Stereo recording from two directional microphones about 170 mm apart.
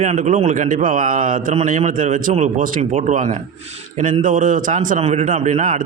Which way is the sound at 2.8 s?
35° right (ahead or behind).